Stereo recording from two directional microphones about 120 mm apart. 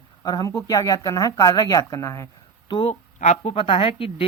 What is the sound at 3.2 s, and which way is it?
Speech, 75° left (ahead or behind).